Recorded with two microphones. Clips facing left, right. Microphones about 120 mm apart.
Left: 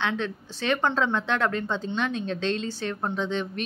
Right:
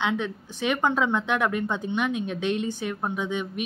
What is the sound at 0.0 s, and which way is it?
Speech, 15° right (ahead or behind).